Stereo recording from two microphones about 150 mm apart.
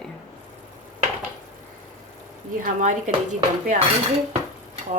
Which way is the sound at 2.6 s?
55° right (ahead or behind).